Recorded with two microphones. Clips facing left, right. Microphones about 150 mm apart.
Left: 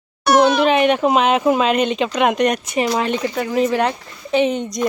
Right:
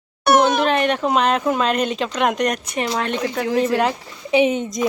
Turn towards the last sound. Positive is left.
turn(degrees=0)  # may be behind; listen again after turning